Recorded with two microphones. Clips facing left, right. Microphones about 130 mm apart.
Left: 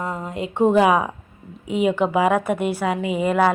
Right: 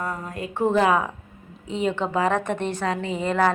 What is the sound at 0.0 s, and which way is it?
A woman's voice, 20° left (ahead or behind).